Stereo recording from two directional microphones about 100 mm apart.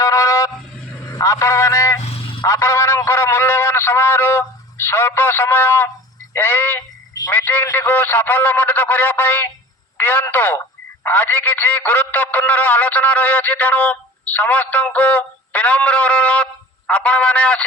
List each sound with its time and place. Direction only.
0.0 s a sound: 35° left (ahead or behind)
1.0 s a man's voice: 30° left (ahead or behind)
2.0 s vehicle: 75° left (ahead or behind); by 2.5 s 60° left (ahead or behind)
2.5 s a man's voice: 30° left (ahead or behind); by 17.7 s 15° left (ahead or behind)